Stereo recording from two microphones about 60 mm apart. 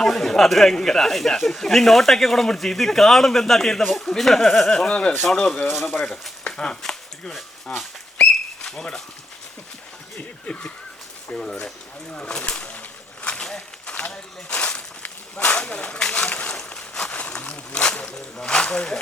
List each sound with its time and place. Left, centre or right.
0.0 s speech: centre
5.9 s speech: centre
6.4 s chopping: centre
7.7 s speech: centre
10.2 s a sound: left
11.3 s speech: centre
12.1 s a sound: centre
16.2 s zipper: left